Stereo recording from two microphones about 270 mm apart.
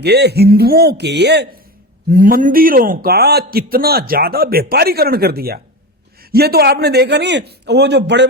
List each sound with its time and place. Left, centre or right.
0.0 s a man's voice: right